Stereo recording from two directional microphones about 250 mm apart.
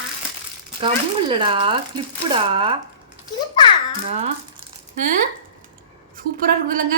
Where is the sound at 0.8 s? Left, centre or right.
Centre.